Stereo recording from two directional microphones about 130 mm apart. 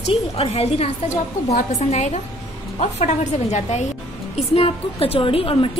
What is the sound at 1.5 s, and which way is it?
A woman's voice, 60° left (ahead or behind).